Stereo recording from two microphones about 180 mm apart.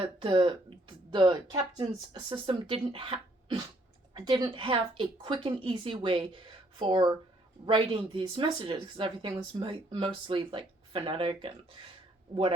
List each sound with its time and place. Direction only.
0.2 s speech: 30° right (ahead or behind)